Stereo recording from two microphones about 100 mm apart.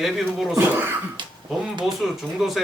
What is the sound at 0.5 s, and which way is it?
Speech, 20° right (ahead or behind).